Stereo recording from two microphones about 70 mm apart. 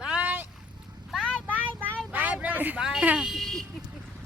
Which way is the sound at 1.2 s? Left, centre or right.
Centre.